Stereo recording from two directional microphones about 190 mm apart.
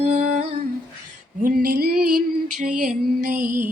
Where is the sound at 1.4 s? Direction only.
50° right (ahead or behind).